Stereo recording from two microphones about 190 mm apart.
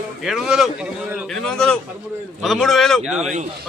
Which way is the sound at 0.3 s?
Centre (ahead or behind).